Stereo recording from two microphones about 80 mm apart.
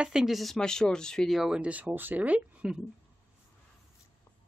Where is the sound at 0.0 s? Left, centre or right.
Centre.